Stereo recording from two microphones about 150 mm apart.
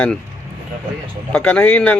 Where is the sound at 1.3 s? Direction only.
10° left (ahead or behind).